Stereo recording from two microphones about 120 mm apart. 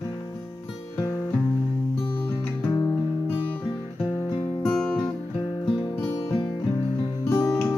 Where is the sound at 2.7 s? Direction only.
25° left (ahead or behind).